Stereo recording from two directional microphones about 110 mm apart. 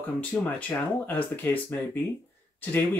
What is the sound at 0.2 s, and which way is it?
Speech, 15° left (ahead or behind).